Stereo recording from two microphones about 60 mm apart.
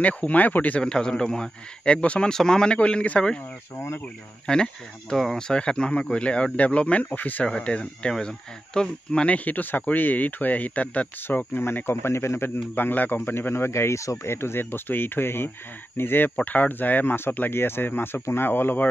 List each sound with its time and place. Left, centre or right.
0.0 s speech: left
0.8 s a man's voice: centre
3.7 s speech: left
4.5 s a man's voice: centre
5.1 s speech: centre
5.5 s speech: centre
7.4 s a man's voice: centre
11.2 s speech: left
12.7 s speech: left
14.3 s speech: left